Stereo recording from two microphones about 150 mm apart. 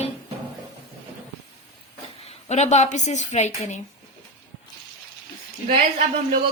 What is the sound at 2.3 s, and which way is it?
A woman's voice, 50° left (ahead or behind).